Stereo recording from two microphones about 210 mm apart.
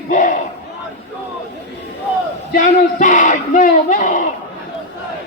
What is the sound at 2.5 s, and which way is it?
Speech, 40° left (ahead or behind).